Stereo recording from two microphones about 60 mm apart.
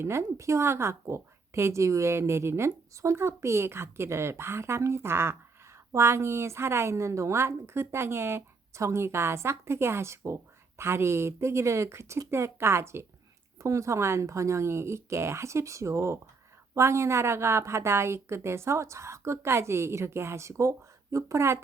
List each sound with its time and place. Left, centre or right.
0.0 s a woman's voice: right
13.6 s a woman's voice: right